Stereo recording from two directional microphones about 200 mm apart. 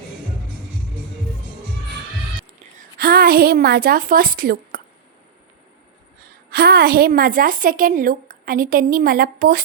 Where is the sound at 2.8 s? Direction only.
50° right (ahead or behind).